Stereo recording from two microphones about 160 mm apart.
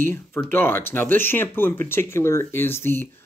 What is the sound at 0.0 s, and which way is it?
Speech, 15° left (ahead or behind).